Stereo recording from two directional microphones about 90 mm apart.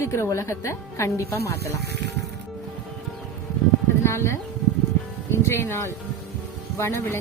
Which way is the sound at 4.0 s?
30° left (ahead or behind).